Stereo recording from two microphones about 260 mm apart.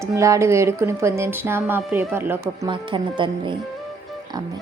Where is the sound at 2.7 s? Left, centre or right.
Centre.